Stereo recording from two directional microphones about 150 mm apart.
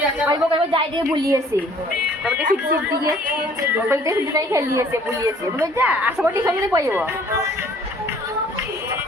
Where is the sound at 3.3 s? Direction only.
15° right (ahead or behind).